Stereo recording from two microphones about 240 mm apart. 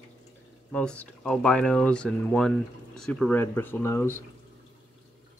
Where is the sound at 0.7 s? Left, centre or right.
Centre.